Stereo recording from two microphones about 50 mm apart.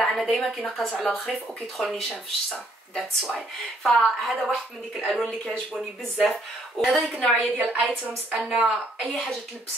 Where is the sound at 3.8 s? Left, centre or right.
Centre.